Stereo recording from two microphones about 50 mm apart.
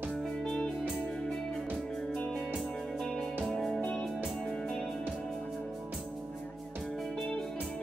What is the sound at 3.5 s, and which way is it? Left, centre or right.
Music, centre.